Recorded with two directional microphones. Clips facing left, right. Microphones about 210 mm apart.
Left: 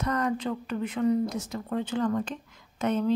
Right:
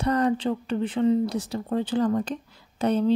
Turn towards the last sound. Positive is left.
turn(degrees=-35)  # may be behind; listen again after turning